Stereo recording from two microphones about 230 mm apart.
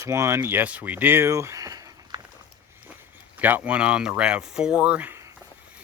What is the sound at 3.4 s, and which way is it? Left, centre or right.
Speech, centre.